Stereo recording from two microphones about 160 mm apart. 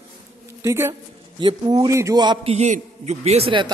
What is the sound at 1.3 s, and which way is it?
A man's voice, 30° right (ahead or behind).